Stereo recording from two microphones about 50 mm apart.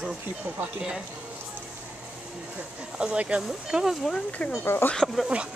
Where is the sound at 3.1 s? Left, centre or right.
Right.